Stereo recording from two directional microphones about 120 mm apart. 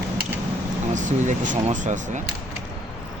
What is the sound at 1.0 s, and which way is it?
Speech, 90° right.